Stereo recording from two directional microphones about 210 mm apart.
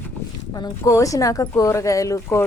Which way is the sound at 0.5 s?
15° left (ahead or behind).